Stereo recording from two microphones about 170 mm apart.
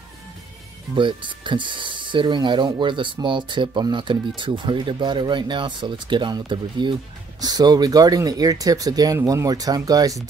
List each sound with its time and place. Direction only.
0.9 s speech: 30° right (ahead or behind)